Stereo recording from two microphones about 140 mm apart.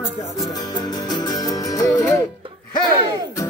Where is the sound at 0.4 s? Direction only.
30° left (ahead or behind).